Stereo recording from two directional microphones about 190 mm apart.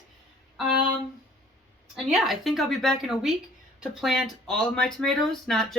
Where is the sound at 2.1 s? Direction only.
Centre (ahead or behind).